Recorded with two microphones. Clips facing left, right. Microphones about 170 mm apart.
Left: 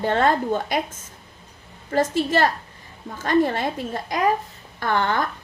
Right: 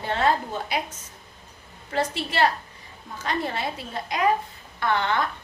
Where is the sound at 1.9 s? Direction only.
45° left (ahead or behind).